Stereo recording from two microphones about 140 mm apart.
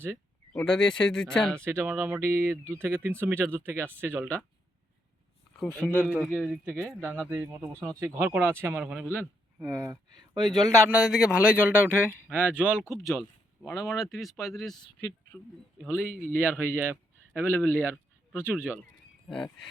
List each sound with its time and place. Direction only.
0.5 s speech: 5° left (ahead or behind)
1.5 s a man's voice: 15° right (ahead or behind)
5.8 s speech: 5° left (ahead or behind)
6.7 s a man's voice: 15° right (ahead or behind)
9.6 s speech: 20° right (ahead or behind)
10.9 s a man's voice: 5° right (ahead or behind)
16.0 s a man's voice: 10° right (ahead or behind)
19.3 s speech: 5° left (ahead or behind)